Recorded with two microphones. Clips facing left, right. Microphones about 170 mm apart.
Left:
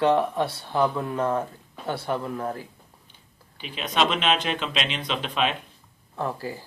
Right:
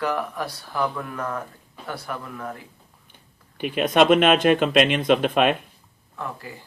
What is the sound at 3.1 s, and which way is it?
Speech, 55° right (ahead or behind).